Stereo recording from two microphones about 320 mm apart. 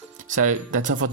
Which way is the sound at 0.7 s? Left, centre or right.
Right.